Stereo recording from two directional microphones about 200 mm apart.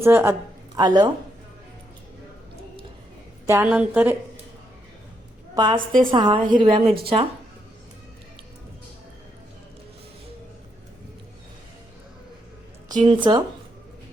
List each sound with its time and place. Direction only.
0.0 s a woman's voice: 10° right (ahead or behind)
3.4 s a woman's voice: 15° right (ahead or behind)
5.5 s a woman's voice: 25° right (ahead or behind)
13.1 s a woman's voice: 20° right (ahead or behind)